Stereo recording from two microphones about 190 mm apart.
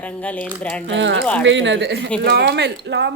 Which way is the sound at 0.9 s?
70° right (ahead or behind).